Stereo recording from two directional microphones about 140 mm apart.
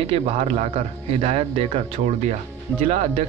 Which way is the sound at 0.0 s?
45° right (ahead or behind).